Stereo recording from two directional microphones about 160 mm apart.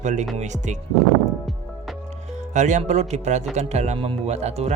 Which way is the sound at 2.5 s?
50° right (ahead or behind).